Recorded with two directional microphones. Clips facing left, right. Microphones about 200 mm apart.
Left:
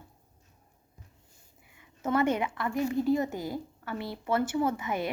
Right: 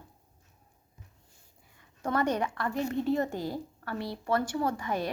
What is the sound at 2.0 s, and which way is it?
A woman's voice, 5° left (ahead or behind).